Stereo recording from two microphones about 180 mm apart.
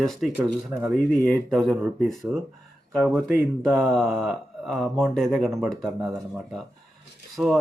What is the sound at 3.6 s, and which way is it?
Speech, centre (ahead or behind).